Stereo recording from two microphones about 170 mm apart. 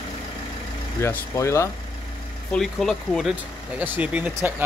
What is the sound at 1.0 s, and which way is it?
Speech, 15° left (ahead or behind).